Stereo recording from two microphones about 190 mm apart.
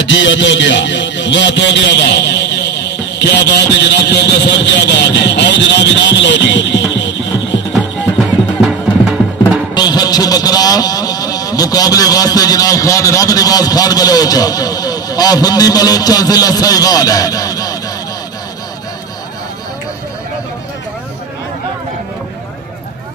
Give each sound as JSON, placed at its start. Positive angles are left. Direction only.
{"t": 0.0, "sound": "a man's voice", "side_deg": 75}
{"t": 9.4, "sound": "vehicle", "side_deg": 20}